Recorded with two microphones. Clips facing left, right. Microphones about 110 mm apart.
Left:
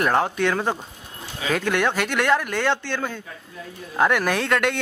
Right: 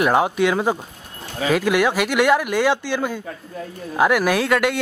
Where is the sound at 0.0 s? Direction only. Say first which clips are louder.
Right 3 dB; 10° right (ahead or behind).